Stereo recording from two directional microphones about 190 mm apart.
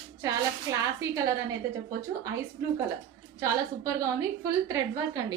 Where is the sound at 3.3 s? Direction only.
15° right (ahead or behind).